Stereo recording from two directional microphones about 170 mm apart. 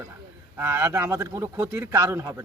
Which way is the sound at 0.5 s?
15° right (ahead or behind).